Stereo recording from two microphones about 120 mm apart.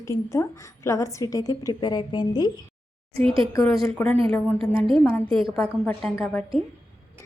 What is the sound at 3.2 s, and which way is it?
Speech, 50° right (ahead or behind).